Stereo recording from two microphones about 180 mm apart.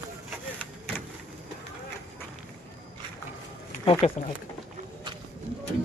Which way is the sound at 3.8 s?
35° left (ahead or behind).